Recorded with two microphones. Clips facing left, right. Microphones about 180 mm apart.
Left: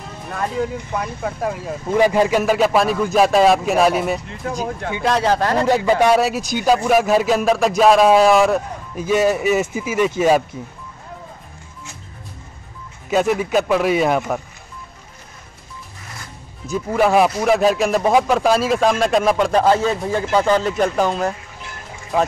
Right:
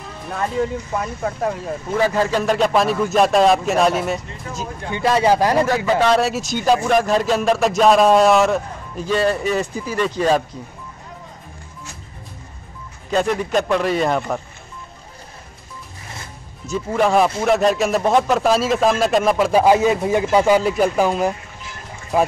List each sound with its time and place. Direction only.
0.3 s a man's voice: centre (ahead or behind)
2.0 s a man's voice: 15° left (ahead or behind); by 5.7 s 15° right (ahead or behind)
5.9 s a man's voice: 10° left (ahead or behind)
13.1 s a man's voice: 5° left (ahead or behind)
16.6 s a man's voice: centre (ahead or behind)